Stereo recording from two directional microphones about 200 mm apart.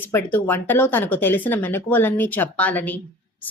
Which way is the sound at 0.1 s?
10° left (ahead or behind).